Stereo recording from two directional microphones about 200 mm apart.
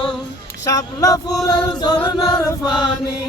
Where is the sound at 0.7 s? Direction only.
15° left (ahead or behind).